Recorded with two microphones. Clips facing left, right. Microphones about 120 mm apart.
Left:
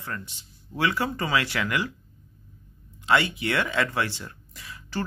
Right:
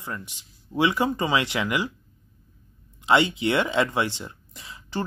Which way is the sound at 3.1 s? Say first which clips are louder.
Right 3 dB; 20° right (ahead or behind).